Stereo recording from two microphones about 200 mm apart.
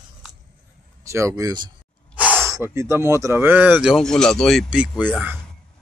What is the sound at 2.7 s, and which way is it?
Speech, 15° right (ahead or behind).